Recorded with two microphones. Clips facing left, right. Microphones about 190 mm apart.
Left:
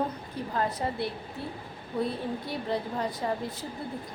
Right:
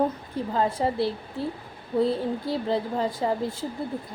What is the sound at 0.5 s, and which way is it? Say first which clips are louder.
A woman's voice: right 5 dB; 25° right (ahead or behind).